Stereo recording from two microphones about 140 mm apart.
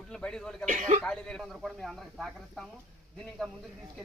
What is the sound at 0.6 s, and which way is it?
Speech, 60° right (ahead or behind).